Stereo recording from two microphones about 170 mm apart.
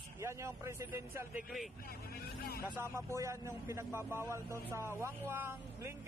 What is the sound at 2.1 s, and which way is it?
Vehicle, 65° left (ahead or behind).